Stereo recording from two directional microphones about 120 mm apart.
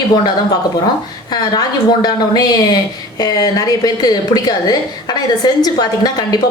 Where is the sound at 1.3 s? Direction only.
35° left (ahead or behind).